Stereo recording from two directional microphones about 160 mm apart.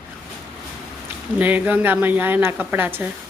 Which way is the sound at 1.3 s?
10° right (ahead or behind).